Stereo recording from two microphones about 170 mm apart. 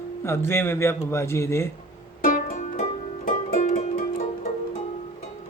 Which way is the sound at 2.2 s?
50° left (ahead or behind).